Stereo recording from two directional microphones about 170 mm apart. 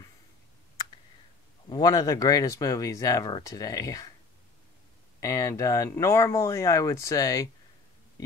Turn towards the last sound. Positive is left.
turn(degrees=20)  # may be behind; listen again after turning